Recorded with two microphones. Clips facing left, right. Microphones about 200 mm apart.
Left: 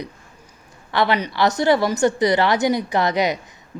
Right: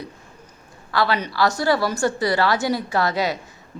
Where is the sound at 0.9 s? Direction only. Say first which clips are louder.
Left 2 dB; 20° left (ahead or behind).